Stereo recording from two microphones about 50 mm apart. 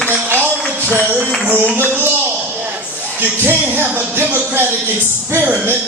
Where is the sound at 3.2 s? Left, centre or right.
Right.